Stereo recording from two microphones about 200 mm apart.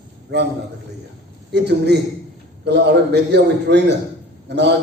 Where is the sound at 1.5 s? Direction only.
55° right (ahead or behind).